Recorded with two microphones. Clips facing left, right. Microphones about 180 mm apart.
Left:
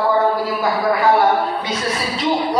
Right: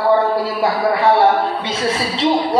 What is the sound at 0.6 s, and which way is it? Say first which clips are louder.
A woman's voice: right 1 dB; 30° right (ahead or behind).